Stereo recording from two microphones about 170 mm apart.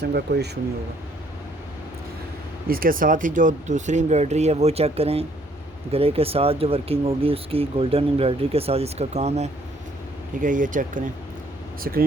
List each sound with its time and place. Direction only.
0.0 s speech: 75° right (ahead or behind)
2.6 s speech: 60° right (ahead or behind); by 9.5 s 40° right (ahead or behind)
10.4 s speech: 50° right (ahead or behind)